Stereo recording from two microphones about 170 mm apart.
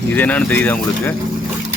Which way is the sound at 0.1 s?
10° left (ahead or behind).